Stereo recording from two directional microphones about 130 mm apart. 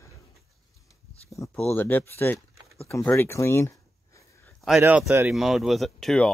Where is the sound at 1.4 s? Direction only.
20° left (ahead or behind).